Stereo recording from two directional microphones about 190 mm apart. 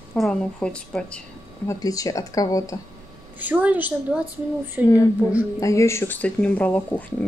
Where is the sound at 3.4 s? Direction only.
10° right (ahead or behind).